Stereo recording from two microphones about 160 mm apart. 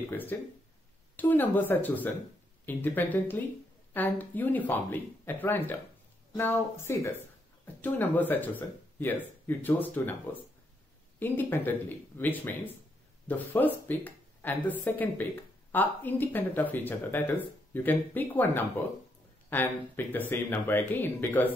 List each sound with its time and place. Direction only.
0.1 s speech: 10° left (ahead or behind)